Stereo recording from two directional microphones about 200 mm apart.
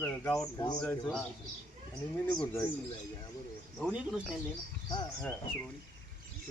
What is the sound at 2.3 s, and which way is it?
Speech, 5° left (ahead or behind).